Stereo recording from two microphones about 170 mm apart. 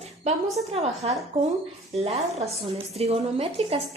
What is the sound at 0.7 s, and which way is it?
A woman's voice, 35° right (ahead or behind).